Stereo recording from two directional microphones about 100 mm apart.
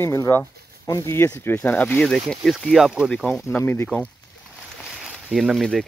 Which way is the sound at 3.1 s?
10° left (ahead or behind).